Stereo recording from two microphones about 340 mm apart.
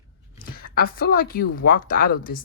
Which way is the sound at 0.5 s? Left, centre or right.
Left.